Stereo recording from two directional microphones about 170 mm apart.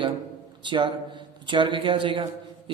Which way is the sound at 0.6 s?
25° right (ahead or behind).